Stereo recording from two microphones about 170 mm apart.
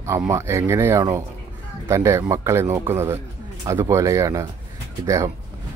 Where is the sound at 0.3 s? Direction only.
15° right (ahead or behind).